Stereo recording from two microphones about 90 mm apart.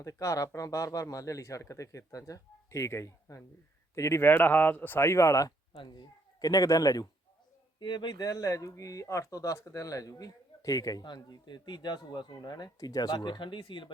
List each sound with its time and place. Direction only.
0.0 s speech: 35° left (ahead or behind)
5.7 s a man's voice: 60° left (ahead or behind); by 7.1 s 45° left (ahead or behind)
7.8 s speech: 55° left (ahead or behind)